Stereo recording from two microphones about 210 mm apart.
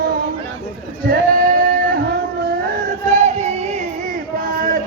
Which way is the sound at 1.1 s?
40° right (ahead or behind).